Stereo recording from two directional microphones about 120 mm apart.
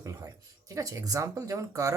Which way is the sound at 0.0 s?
30° right (ahead or behind).